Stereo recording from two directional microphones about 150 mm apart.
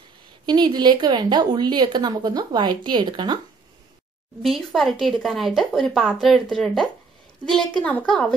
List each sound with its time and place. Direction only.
0.5 s a woman's voice: 30° right (ahead or behind)
4.4 s speech: centre (ahead or behind)